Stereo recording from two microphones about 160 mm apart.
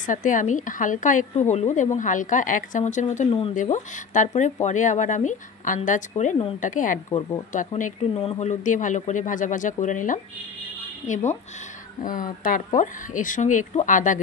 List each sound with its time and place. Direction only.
0.0 s speech: 55° left (ahead or behind)
3.3 s speech: 35° left (ahead or behind)
3.6 s speech: 50° left (ahead or behind)
7.1 s speech: 30° left (ahead or behind)
7.5 s speech: 50° left (ahead or behind)